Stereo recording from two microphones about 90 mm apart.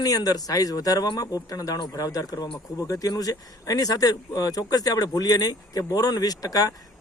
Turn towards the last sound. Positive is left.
turn(degrees=45)  # may be behind; listen again after turning